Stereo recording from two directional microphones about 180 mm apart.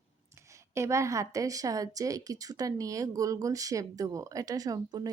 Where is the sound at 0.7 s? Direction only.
15° right (ahead or behind).